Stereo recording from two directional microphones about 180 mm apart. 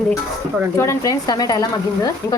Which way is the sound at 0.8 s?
15° left (ahead or behind).